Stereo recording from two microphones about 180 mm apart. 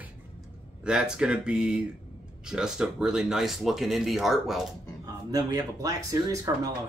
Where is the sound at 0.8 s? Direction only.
5° right (ahead or behind).